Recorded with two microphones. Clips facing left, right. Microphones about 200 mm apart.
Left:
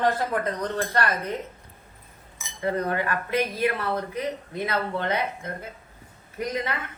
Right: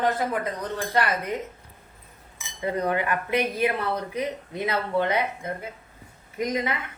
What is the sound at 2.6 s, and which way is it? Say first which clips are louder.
A woman's voice: even; 15° right (ahead or behind).